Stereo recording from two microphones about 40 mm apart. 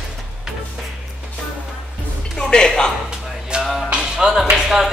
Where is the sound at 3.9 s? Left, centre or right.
Centre.